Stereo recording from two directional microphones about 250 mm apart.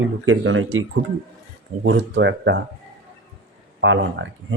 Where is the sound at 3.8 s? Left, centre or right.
Right.